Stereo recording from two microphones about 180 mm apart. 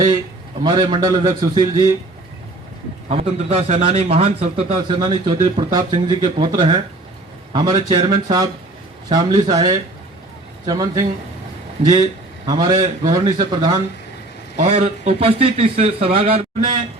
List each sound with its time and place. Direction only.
0.6 s a man's voice: 25° right (ahead or behind)
3.1 s a man's voice: 35° right (ahead or behind); by 11.0 s 20° right (ahead or behind)
12.5 s a man's voice: 25° right (ahead or behind)
14.5 s a man's voice: 40° right (ahead or behind)